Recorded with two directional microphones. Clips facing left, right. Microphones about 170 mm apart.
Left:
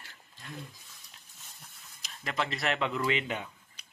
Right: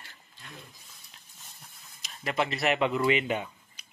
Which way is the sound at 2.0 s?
10° right (ahead or behind).